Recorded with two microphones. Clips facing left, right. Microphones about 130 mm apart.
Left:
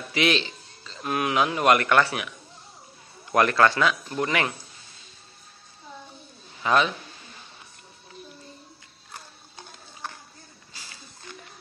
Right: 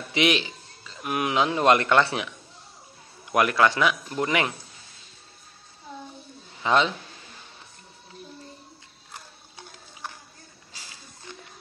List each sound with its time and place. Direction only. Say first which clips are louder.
0.1 s a man's voice: right 1 dB; 15° right (ahead or behind)
3.3 s speech: left 1 dB; 10° right (ahead or behind)
6.6 s a man's voice: even; 20° right (ahead or behind)